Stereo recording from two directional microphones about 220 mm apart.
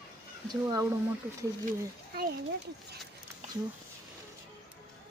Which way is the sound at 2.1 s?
45° right (ahead or behind).